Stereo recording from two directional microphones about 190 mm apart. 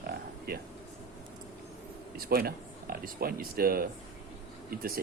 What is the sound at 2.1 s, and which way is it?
Speech, 50° right (ahead or behind).